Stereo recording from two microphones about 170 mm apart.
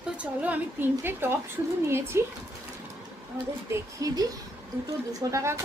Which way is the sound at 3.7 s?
20° right (ahead or behind).